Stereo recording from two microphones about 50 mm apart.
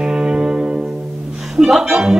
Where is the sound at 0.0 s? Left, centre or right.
Centre.